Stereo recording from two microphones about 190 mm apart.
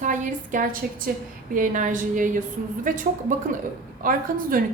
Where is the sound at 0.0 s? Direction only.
40° right (ahead or behind).